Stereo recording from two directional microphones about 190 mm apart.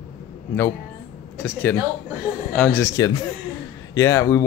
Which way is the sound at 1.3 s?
10° left (ahead or behind).